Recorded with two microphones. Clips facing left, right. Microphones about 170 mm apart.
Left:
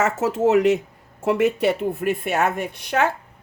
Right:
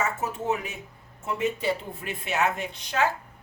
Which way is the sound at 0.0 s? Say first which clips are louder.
Left 10 dB; 85° left.